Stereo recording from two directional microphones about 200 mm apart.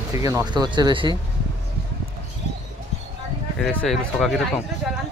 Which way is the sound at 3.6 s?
5° left (ahead or behind).